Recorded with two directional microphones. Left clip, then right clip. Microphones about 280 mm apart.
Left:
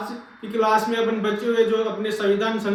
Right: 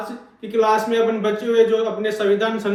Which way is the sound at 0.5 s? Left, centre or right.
Centre.